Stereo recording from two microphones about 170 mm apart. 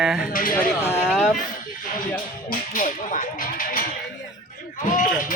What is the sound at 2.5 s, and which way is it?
Whip, 50° left (ahead or behind).